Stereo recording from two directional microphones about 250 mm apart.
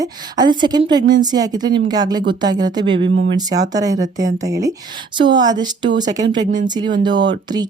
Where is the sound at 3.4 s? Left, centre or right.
Centre.